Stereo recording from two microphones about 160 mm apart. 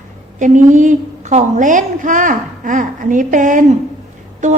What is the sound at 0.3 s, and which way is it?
A woman's voice, 50° right (ahead or behind).